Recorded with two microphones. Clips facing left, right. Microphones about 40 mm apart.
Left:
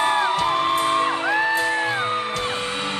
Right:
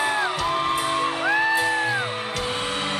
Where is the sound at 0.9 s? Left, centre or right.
Centre.